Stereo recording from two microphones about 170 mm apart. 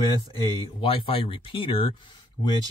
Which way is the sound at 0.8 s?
35° left (ahead or behind).